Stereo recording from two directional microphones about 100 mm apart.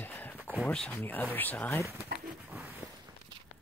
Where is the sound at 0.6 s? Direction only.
15° left (ahead or behind).